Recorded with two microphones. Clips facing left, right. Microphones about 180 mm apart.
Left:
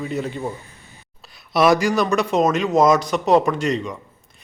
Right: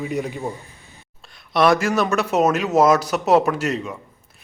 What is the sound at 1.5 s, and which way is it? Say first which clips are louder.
Speech: left 1 dB; centre (ahead or behind).